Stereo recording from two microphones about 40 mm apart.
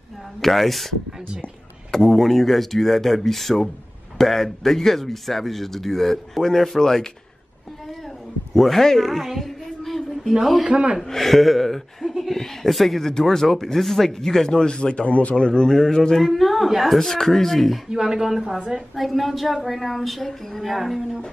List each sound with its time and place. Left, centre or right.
0.4 s speech: centre
8.5 s a sound: centre
10.6 s speech: right
11.0 s speech: centre; by 15.3 s left
15.3 s a man's voice: centre
17.8 s speech: centre
18.9 s speech: centre